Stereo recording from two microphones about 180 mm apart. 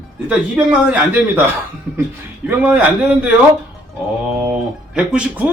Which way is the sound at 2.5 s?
10° right (ahead or behind).